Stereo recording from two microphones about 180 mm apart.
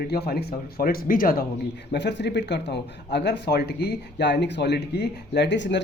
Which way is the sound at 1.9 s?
75° left (ahead or behind).